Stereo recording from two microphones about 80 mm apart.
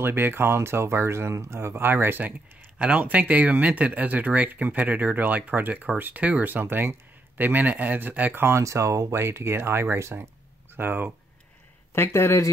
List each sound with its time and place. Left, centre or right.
0.0 s speech: right
11.9 s speech: left